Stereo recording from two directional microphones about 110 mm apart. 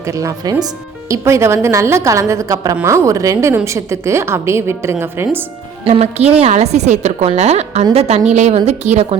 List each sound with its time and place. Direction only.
0.2 s a woman's voice: 30° right (ahead or behind)
5.8 s a woman's voice: 70° right (ahead or behind)
8.4 s a woman's voice: 85° right